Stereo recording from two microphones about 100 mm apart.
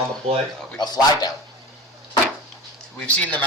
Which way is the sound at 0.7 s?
45° left (ahead or behind).